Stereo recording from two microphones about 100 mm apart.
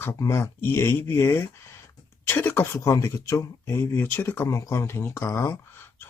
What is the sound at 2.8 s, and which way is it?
Speech, 30° left (ahead or behind).